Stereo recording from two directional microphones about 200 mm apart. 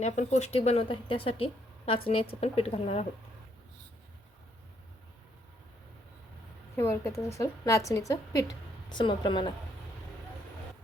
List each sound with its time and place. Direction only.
0.0 s a woman's voice: 35° left (ahead or behind)
6.7 s a woman's voice: 15° left (ahead or behind)